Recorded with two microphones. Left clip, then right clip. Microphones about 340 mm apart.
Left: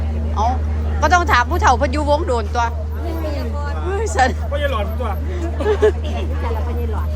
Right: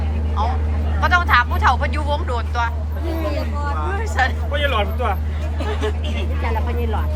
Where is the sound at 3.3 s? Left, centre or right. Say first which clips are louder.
Right 1 dB; right.